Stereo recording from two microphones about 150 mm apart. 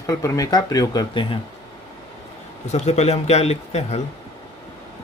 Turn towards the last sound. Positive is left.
turn(degrees=45)  # may be behind; listen again after turning